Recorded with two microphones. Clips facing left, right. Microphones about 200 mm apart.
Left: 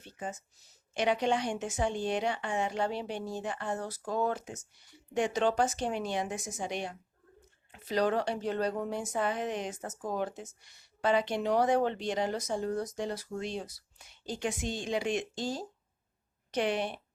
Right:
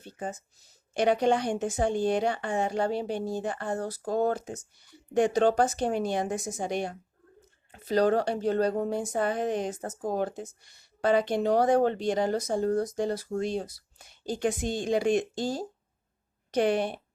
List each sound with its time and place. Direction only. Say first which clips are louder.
0.9 s speech: right 5 dB; 40° right (ahead or behind)
1.5 s speech: right 6 dB; 35° right (ahead or behind)
1.8 s speech: right 5 dB; 45° right (ahead or behind)
6.3 s speech: right 6 dB; 35° right (ahead or behind)
6.6 s speech: right 4 dB; 50° right (ahead or behind)
7.7 s speech: right 5 dB; 40° right (ahead or behind)
11.0 s speech: right 4 dB; 45° right (ahead or behind)